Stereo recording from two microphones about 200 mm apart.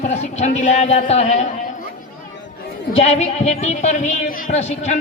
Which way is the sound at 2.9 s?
35° left (ahead or behind).